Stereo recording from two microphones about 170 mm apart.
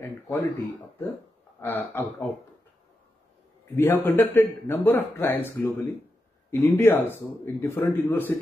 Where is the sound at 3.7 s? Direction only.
15° left (ahead or behind).